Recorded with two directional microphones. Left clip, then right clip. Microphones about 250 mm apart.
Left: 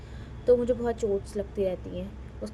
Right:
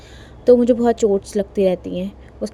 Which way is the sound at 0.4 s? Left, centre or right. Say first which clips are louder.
Right 10 dB; right.